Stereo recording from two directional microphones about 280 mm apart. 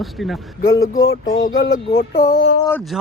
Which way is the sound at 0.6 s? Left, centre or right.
Left.